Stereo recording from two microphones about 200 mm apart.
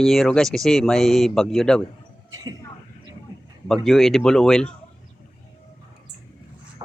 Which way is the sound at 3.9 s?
Centre (ahead or behind).